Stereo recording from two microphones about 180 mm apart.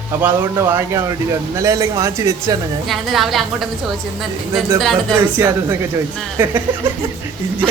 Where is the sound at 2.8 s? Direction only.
Centre (ahead or behind).